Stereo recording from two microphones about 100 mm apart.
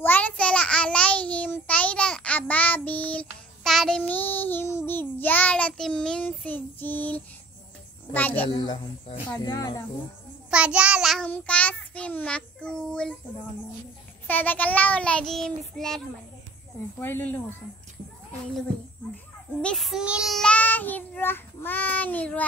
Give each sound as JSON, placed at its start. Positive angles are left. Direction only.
{"t": 0.0, "sound": "child singing", "side_deg": 15}
{"t": 3.6, "sound": "child singing", "side_deg": 5}
{"t": 4.1, "sound": "child singing", "side_deg": 20}
{"t": 8.5, "sound": "speech", "side_deg": 50}
{"t": 10.5, "sound": "child singing", "side_deg": -10}
{"t": 11.2, "sound": "child singing", "side_deg": 15}
{"t": 14.2, "sound": "child singing", "side_deg": 15}
{"t": 17.0, "sound": "speech", "side_deg": 20}
{"t": 19.6, "sound": "child singing", "side_deg": 5}
{"t": 20.3, "sound": "child singing", "side_deg": 10}